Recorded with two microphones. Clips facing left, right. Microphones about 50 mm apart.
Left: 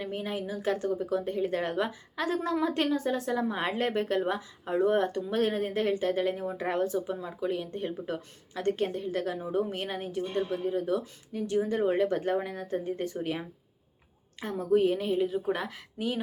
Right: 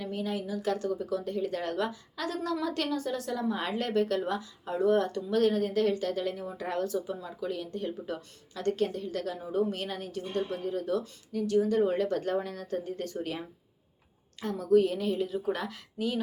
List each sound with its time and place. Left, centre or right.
0.0 s speech: left
14.4 s speech: left